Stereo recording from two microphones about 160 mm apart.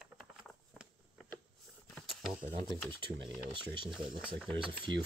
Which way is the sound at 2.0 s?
Centre (ahead or behind).